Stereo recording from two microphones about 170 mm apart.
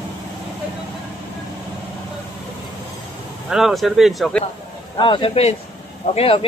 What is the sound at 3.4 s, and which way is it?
Speech, centre (ahead or behind).